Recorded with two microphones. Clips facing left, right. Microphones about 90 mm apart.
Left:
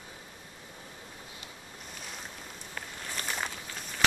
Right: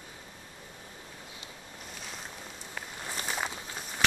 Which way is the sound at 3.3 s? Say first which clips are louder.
Right 2 dB; 5° right (ahead or behind).